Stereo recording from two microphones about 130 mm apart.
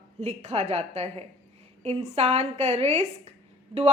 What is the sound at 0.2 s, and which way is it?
A woman's voice, 55° right (ahead or behind).